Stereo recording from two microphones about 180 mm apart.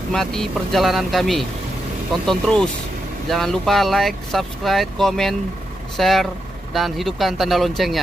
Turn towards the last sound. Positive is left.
turn(degrees=0)  # may be behind; listen again after turning